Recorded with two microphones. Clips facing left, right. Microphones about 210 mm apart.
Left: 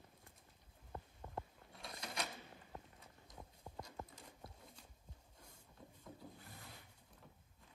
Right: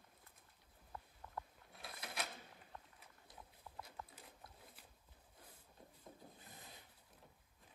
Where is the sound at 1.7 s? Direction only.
5° right (ahead or behind).